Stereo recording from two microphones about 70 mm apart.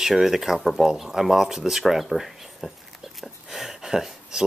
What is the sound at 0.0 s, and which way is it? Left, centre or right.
Speech, centre.